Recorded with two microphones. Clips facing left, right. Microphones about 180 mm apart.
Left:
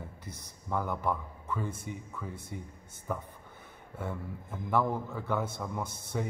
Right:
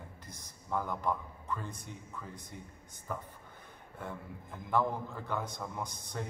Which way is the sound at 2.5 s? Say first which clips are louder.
Left 7 dB; 60° left (ahead or behind).